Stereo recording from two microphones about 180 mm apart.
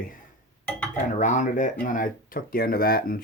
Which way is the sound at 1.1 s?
45° left (ahead or behind).